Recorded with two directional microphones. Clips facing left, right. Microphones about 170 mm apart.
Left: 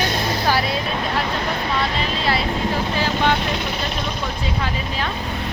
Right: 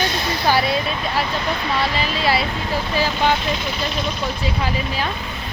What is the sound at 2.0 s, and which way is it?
Speech, 10° right (ahead or behind).